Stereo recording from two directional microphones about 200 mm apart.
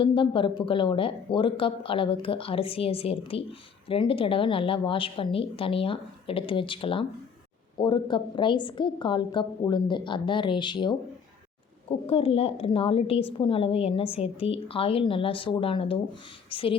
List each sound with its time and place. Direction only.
0.0 s a woman's voice: 25° left (ahead or behind)